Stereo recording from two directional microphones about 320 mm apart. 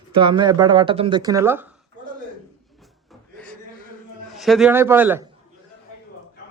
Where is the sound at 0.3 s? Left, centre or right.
Centre.